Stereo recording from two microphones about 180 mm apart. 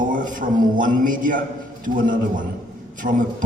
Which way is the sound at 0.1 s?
50° right (ahead or behind).